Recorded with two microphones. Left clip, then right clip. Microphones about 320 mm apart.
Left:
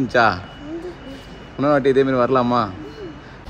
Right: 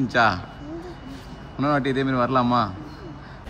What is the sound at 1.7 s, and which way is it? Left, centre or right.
Speech, centre.